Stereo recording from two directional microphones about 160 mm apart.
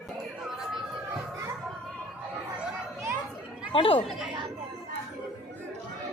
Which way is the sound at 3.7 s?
35° left (ahead or behind).